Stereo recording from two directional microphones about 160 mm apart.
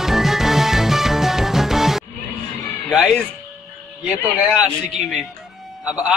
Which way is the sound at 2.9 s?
Centre (ahead or behind).